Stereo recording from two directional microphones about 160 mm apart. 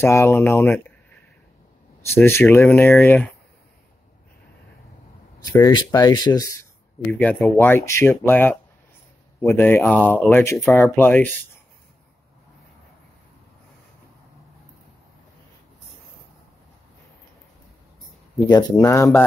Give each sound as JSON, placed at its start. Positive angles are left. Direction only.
{"t": 0.0, "sound": "speech", "side_deg": 15}
{"t": 2.1, "sound": "speech", "side_deg": 15}
{"t": 5.4, "sound": "speech", "side_deg": 25}
{"t": 7.1, "sound": "speech", "side_deg": 5}
{"t": 10.6, "sound": "speech", "side_deg": 0}
{"t": 18.5, "sound": "speech", "side_deg": 25}